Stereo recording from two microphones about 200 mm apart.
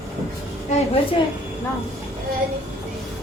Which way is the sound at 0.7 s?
35° left (ahead or behind).